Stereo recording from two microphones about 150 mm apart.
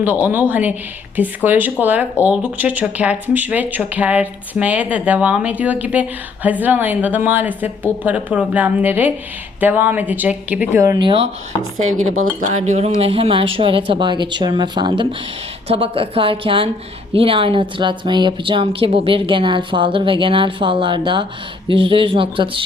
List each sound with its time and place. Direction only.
0.0 s speech: 10° right (ahead or behind)
12.2 s speech: 55° right (ahead or behind); by 22.6 s 35° right (ahead or behind)